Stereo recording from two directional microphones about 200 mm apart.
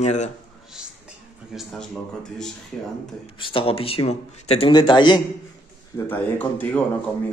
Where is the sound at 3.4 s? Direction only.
25° left (ahead or behind).